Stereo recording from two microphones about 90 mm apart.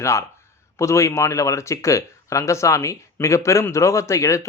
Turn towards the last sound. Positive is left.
turn(degrees=35)  # may be behind; listen again after turning